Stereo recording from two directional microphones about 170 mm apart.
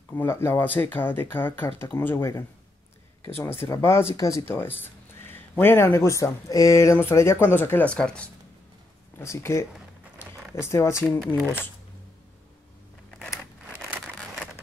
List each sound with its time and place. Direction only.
0.1 s speech: 15° left (ahead or behind)
9.2 s speech: 15° left (ahead or behind)
13.1 s scissors: 5° left (ahead or behind)